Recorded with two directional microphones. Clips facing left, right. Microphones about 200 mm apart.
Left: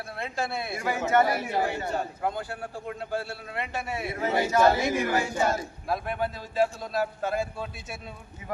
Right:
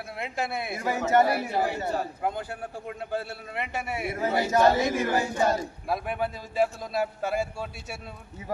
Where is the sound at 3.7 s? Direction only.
15° right (ahead or behind).